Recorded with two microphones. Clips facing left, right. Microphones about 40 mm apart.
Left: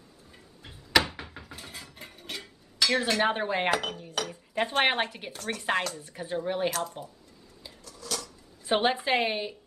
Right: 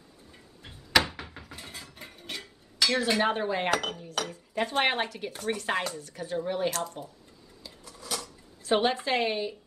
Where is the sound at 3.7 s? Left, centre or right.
Centre.